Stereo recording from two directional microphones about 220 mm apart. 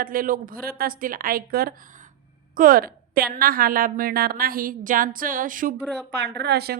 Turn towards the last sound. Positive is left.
turn(degrees=-45)  # may be behind; listen again after turning